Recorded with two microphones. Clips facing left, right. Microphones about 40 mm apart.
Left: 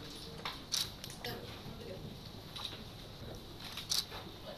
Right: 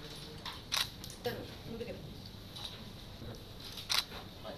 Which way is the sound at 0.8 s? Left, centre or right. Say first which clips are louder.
Right 6 dB; right.